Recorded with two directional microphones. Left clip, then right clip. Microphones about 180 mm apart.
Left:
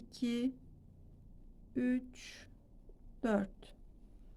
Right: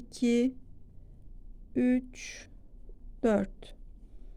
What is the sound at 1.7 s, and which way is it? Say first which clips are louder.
A woman's voice: right 8 dB; 35° right (ahead or behind).